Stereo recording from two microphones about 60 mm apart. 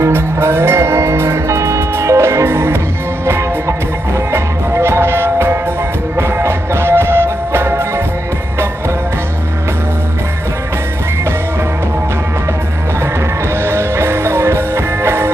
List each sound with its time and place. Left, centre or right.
0.0 s music: right
13.7 s music: right